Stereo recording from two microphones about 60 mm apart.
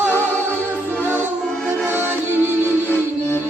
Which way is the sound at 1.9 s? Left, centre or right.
Right.